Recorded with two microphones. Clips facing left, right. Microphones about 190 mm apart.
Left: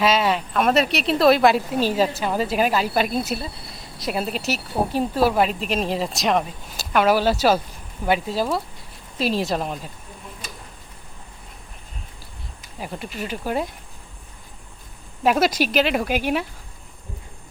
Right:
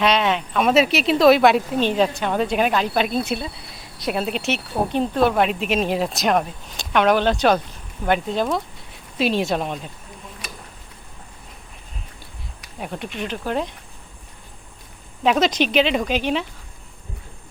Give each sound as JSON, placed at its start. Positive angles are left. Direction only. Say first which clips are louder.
{"t": 0.0, "sound": "a woman's voice", "louder": "even", "side_deg": 5}
{"t": 12.8, "sound": "a woman's voice", "louder": "right 2 dB", "side_deg": 0}
{"t": 15.2, "sound": "speech", "louder": "right 1 dB", "side_deg": 5}